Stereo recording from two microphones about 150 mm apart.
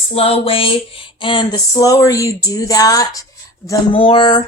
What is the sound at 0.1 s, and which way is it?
A woman's voice, 40° left (ahead or behind).